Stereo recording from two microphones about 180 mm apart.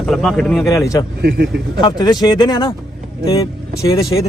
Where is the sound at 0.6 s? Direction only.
15° left (ahead or behind).